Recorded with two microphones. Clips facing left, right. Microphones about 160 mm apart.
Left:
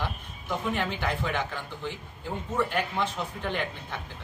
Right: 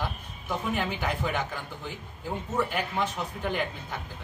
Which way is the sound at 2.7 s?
10° right (ahead or behind).